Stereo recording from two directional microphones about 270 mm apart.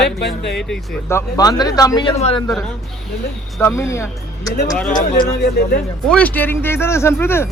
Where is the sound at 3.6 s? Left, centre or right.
Centre.